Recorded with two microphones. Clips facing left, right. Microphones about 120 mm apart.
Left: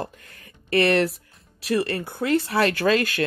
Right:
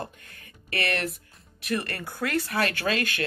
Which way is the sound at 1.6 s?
30° left (ahead or behind).